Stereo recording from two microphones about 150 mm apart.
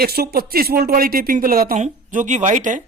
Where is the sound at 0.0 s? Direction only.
90° right; by 1.7 s 75° right (ahead or behind).